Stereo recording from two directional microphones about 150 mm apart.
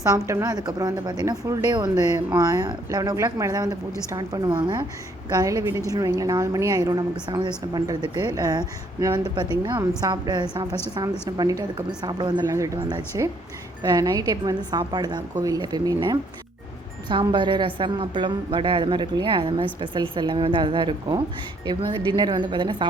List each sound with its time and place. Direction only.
0.0 s a woman's voice: 20° right (ahead or behind)